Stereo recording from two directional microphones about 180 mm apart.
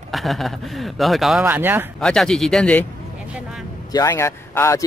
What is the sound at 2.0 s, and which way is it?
Speech, 5° left (ahead or behind).